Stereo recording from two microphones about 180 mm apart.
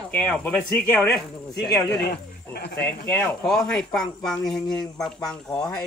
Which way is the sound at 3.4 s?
Centre (ahead or behind).